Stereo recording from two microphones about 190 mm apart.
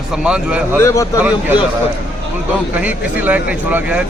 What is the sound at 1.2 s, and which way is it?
Speech, 5° right (ahead or behind).